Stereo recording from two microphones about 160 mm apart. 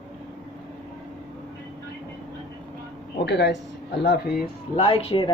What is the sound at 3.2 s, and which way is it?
Speech, 90° left.